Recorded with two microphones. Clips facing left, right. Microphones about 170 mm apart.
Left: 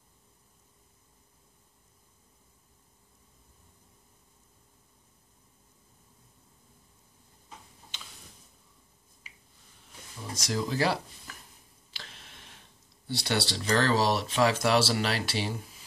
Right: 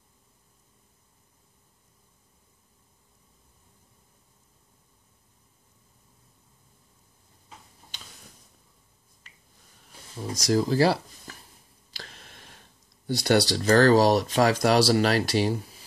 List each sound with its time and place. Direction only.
9.3 s finger snapping: 10° left (ahead or behind)
10.3 s speech: 35° right (ahead or behind)
11.9 s a sound: 40° right (ahead or behind)
13.0 s speech: 45° right (ahead or behind)